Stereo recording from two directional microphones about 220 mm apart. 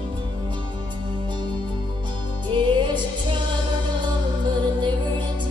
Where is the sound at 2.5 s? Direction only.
20° right (ahead or behind).